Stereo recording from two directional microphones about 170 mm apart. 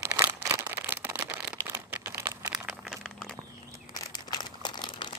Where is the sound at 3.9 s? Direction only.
25° left (ahead or behind).